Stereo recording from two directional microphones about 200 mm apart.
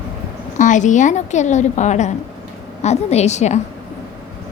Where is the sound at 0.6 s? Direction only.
40° left (ahead or behind).